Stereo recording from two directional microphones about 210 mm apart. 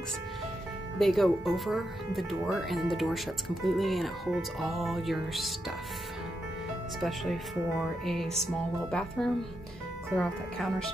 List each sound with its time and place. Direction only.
0.9 s speech: centre (ahead or behind)
7.0 s speech: centre (ahead or behind)